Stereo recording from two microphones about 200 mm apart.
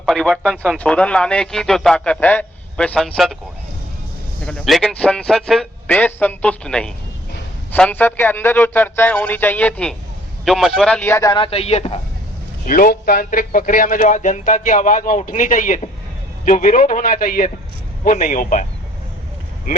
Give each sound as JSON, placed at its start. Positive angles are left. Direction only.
{"t": 0.0, "sound": "speech", "side_deg": 5}
{"t": 4.4, "sound": "a man's voice", "side_deg": 5}
{"t": 12.6, "sound": "a man's voice", "side_deg": 45}